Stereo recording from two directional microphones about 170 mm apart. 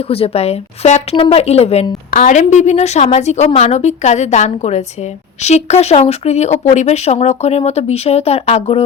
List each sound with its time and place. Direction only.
0.1 s speech: 35° left (ahead or behind)
2.0 s a woman's voice: 50° left (ahead or behind)